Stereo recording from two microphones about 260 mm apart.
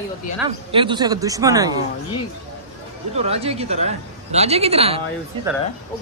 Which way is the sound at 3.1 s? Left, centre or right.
Right.